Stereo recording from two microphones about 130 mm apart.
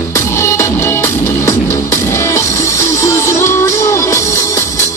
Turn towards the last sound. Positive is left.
turn(degrees=20)  # may be behind; listen again after turning